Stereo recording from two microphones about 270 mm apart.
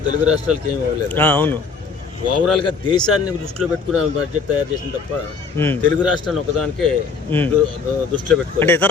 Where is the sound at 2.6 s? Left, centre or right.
Centre.